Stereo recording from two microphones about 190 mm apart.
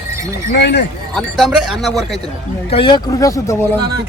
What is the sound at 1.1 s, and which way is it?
Speech, centre (ahead or behind).